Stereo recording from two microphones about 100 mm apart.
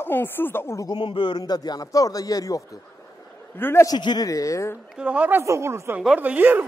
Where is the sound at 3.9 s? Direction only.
45° left (ahead or behind).